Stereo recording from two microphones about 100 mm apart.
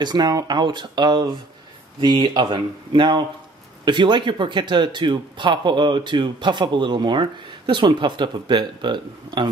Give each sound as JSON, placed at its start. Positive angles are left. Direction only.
{"t": 0.0, "sound": "speech", "side_deg": -45}